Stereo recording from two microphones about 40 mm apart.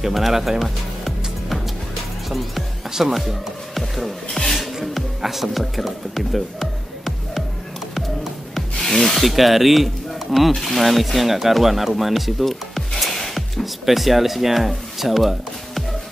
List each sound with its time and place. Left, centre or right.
0.0 s music: centre
2.9 s speech: centre
7.9 s music: centre
8.8 s speech: centre
13.0 s music: centre